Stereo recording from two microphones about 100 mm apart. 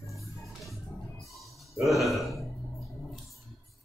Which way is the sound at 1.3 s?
Centre (ahead or behind).